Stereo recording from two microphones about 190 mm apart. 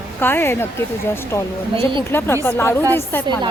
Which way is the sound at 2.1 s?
10° left (ahead or behind).